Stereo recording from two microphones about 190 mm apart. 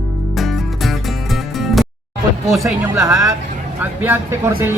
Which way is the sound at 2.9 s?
15° right (ahead or behind).